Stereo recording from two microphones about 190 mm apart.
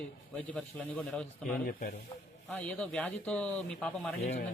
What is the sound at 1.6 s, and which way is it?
Speech, 50° left (ahead or behind).